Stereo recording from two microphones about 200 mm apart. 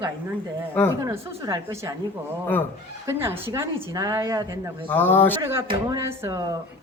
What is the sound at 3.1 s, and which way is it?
A woman's voice, 10° right (ahead or behind).